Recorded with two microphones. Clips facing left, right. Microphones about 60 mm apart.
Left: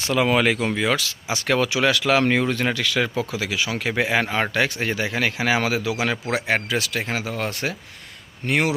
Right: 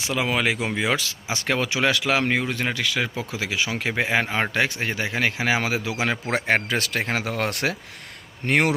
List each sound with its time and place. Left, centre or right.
0.1 s speech: centre
0.5 s speech: centre
1.3 s a man's voice: right
2.2 s speech: centre
2.7 s a man's voice: right
6.5 s speech: right
8.4 s speech: right